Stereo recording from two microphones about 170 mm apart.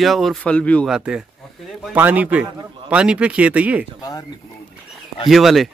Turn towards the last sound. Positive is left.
turn(degrees=0)  # may be behind; listen again after turning